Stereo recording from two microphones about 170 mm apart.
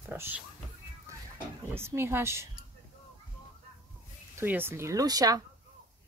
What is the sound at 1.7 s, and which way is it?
Speech, 15° right (ahead or behind).